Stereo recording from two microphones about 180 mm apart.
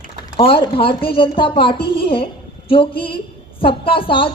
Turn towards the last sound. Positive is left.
turn(degrees=30)  # may be behind; listen again after turning